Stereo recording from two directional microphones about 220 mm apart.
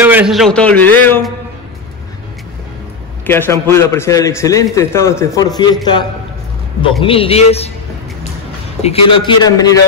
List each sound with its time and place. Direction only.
0.0 s a man's voice: 5° right (ahead or behind); by 1.3 s 10° left (ahead or behind)
3.3 s a man's voice: 10° left (ahead or behind)
6.8 s a man's voice: 25° left (ahead or behind)
8.8 s a man's voice: 25° left (ahead or behind)